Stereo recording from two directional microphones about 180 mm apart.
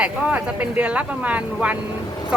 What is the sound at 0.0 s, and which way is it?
Speech, 10° right (ahead or behind).